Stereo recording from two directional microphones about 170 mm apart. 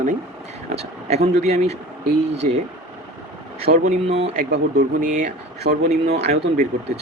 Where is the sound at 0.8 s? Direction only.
40° right (ahead or behind).